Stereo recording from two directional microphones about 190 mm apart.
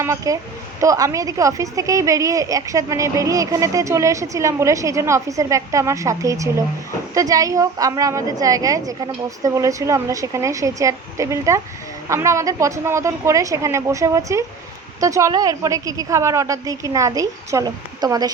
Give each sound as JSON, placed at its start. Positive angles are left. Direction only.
{"t": 0.0, "sound": "a woman's voice", "side_deg": -15}